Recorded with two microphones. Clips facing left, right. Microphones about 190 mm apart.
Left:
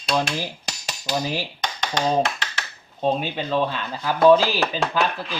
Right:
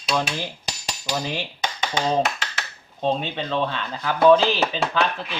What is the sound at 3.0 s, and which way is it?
Speech, 5° left (ahead or behind).